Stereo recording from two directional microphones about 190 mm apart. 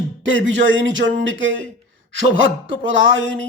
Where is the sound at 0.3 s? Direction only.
80° right.